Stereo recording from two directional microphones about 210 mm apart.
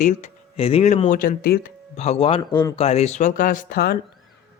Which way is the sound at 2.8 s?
30° left (ahead or behind).